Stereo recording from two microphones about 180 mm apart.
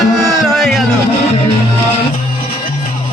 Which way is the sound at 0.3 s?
Centre (ahead or behind).